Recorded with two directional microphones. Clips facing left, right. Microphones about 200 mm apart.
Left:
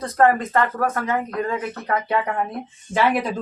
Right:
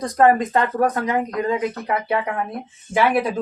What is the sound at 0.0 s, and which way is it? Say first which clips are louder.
Speech: right 2 dB; 15° right (ahead or behind).